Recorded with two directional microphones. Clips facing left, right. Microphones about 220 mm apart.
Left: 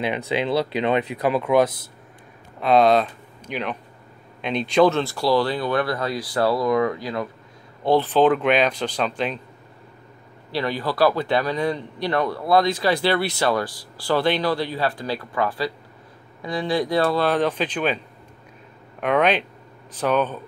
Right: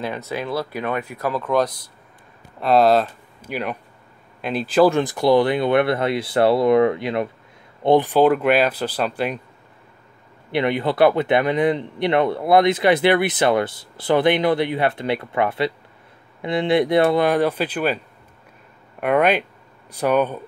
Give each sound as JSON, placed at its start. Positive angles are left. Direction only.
{"t": 0.3, "sound": "speech", "side_deg": 20}
{"t": 2.6, "sound": "speech", "side_deg": 0}
{"t": 10.5, "sound": "speech", "side_deg": -20}